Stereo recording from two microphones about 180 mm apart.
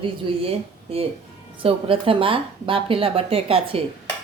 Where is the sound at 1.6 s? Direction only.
30° right (ahead or behind).